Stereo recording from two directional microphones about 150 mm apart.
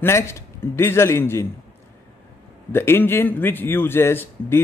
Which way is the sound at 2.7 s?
15° left (ahead or behind).